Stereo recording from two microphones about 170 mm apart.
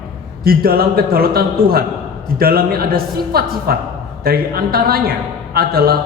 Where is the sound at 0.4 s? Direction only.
60° right (ahead or behind).